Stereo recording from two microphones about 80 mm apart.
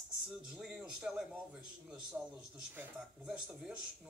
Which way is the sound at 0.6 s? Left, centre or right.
Centre.